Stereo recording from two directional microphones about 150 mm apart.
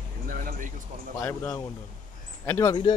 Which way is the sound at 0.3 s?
70° right (ahead or behind).